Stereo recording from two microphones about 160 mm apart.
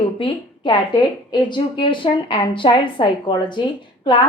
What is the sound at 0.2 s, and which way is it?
A woman's voice, 30° left (ahead or behind).